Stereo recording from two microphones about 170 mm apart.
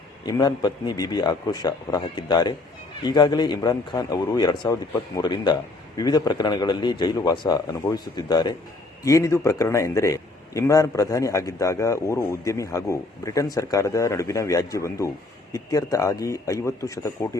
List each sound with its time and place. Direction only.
0.3 s a man's voice: 25° left (ahead or behind)